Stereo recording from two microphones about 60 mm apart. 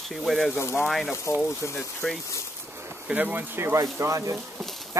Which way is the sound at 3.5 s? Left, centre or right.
Right.